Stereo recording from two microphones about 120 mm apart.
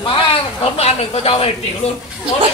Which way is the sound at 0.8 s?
55° left (ahead or behind).